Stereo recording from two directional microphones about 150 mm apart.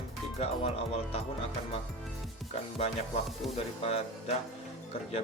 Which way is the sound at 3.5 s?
45° left (ahead or behind).